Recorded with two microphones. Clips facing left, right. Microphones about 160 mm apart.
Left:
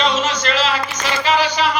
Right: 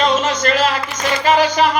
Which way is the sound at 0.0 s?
50° right (ahead or behind).